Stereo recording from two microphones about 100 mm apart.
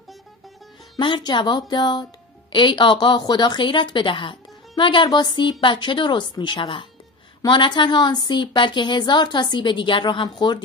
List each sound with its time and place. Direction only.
0.9 s a woman's voice: 50° left (ahead or behind)
7.4 s a woman's voice: 50° left (ahead or behind)